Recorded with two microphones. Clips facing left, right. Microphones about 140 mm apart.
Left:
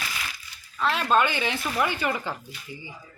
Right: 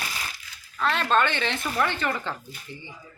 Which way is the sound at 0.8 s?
5° left (ahead or behind).